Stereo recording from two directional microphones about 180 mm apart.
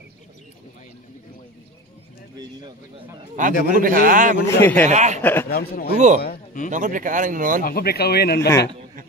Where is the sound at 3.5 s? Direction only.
50° left (ahead or behind).